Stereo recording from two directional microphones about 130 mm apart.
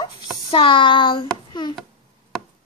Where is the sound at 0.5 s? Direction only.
40° left (ahead or behind).